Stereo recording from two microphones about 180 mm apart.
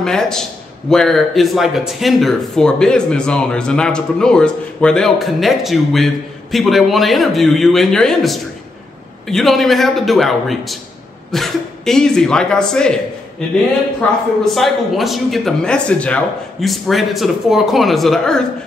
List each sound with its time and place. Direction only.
0.0 s a man's voice: 5° left (ahead or behind)
14.4 s a man's voice: centre (ahead or behind)